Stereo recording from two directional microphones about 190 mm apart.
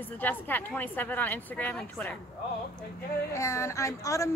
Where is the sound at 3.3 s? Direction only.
15° left (ahead or behind).